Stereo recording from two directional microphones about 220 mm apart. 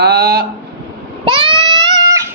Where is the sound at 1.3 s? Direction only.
20° right (ahead or behind).